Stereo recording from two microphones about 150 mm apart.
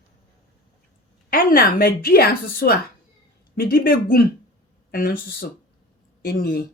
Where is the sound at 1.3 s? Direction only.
75° left (ahead or behind); by 6.6 s 90° left.